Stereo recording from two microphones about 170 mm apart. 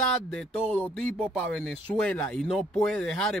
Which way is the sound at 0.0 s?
5° left (ahead or behind).